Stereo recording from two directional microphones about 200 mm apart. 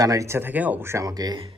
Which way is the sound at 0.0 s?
15° right (ahead or behind).